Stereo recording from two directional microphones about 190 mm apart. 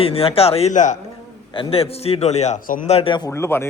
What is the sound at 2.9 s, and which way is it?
Speech, 30° left (ahead or behind).